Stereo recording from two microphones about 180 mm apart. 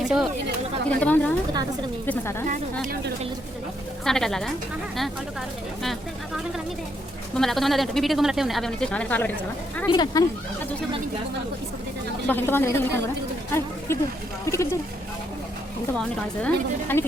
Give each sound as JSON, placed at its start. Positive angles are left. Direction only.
{"t": 0.0, "sound": "a woman's voice", "side_deg": 0}
{"t": 2.8, "sound": "a woman's voice", "side_deg": -55}
{"t": 4.0, "sound": "a woman's voice", "side_deg": 5}
{"t": 5.8, "sound": "a woman's voice", "side_deg": 0}
{"t": 9.8, "sound": "speech", "side_deg": 25}
{"t": 12.3, "sound": "a woman's voice", "side_deg": 10}